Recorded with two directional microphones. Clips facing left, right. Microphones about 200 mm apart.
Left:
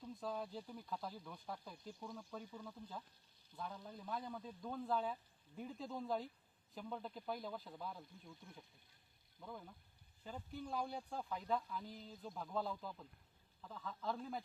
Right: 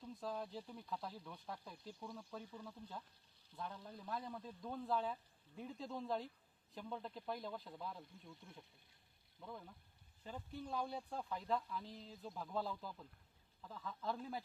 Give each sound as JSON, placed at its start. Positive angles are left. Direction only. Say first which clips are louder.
{"t": 0.0, "sound": "speech", "louder": "left 1 dB", "side_deg": 0}
{"t": 9.4, "sound": "speech", "louder": "even", "side_deg": 0}